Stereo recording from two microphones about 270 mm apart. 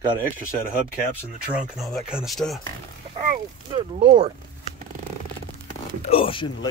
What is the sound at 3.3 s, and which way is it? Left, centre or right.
Speech, right.